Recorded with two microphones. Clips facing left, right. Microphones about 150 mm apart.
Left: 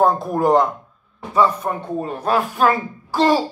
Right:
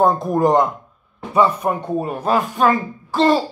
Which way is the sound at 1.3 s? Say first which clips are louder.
Right 1 dB; 15° right (ahead or behind).